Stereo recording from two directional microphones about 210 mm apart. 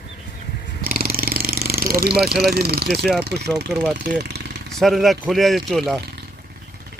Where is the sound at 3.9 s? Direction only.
50° right (ahead or behind).